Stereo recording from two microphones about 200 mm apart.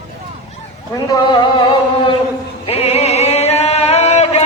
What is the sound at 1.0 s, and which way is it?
Speech, 15° left (ahead or behind).